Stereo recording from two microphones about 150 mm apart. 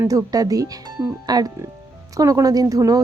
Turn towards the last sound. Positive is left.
turn(degrees=-25)  # may be behind; listen again after turning